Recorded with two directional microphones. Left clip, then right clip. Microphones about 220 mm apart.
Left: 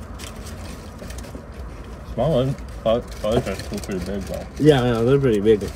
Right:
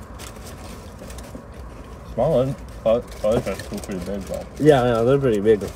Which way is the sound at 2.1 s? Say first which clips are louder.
Right 1 dB; 15° right (ahead or behind).